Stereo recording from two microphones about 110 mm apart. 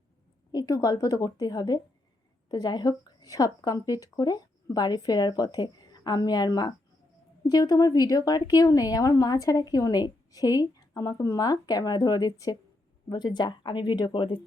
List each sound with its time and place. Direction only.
0.5 s a woman's voice: 30° left (ahead or behind); by 14.3 s 50° left (ahead or behind)